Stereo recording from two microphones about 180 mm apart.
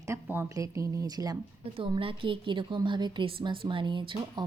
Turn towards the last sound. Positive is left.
turn(degrees=-25)  # may be behind; listen again after turning